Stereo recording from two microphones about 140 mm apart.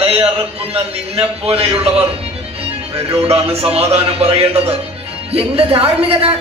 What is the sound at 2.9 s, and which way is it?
A man's voice, 45° right (ahead or behind).